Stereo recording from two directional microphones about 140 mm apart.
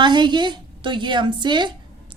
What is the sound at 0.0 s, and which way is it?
A woman's voice, 35° right (ahead or behind).